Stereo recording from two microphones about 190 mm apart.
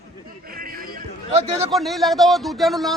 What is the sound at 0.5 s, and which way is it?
Music, 50° right (ahead or behind).